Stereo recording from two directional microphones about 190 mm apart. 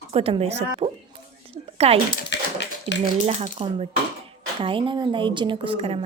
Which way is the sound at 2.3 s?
65° left (ahead or behind).